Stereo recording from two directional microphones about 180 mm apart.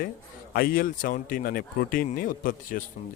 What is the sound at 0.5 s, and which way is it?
A man's voice, 55° left (ahead or behind).